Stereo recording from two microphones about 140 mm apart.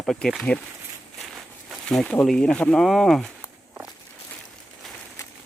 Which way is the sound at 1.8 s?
5° left (ahead or behind).